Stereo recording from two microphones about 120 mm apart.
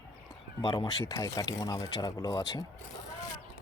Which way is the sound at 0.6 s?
40° left (ahead or behind).